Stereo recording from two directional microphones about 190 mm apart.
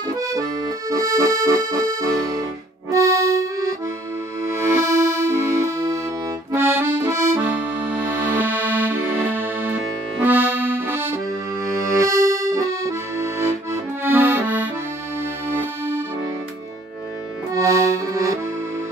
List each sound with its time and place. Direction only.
0.0 s accordion: 20° right (ahead or behind)
4.8 s music: 15° right (ahead or behind)
6.5 s accordion: 10° right (ahead or behind)
15.4 s music: 10° right (ahead or behind)
17.6 s accordion: 15° right (ahead or behind)